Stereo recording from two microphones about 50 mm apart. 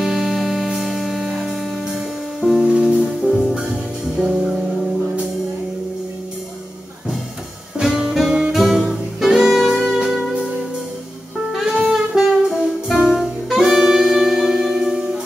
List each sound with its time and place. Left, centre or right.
0.0 s music: centre
7.8 s music: centre
11.6 s saxophone: centre